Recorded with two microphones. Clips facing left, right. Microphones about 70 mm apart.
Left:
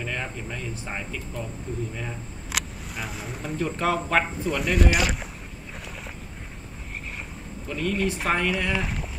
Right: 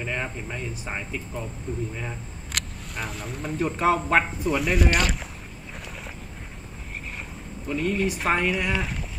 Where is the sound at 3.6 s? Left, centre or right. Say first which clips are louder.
Right 3 dB; centre.